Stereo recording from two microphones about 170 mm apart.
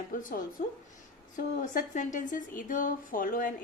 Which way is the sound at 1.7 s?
50° left (ahead or behind).